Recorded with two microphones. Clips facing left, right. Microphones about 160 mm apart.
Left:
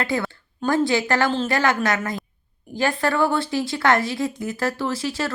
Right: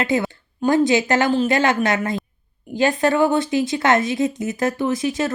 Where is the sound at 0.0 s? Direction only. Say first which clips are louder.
Right 4 dB; 20° right (ahead or behind).